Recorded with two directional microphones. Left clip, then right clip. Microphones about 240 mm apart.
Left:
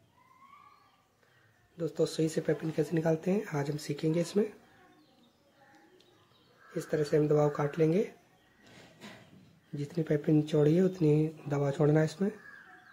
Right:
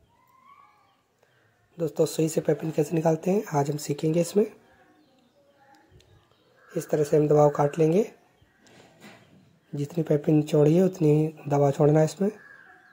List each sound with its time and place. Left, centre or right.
1.8 s speech: centre
6.7 s speech: centre
9.8 s speech: centre